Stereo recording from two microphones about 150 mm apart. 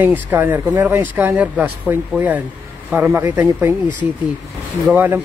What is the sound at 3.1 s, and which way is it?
Speech, 15° right (ahead or behind).